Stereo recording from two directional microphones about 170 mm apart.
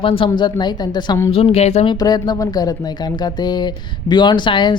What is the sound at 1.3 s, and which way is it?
Speech, 35° left (ahead or behind).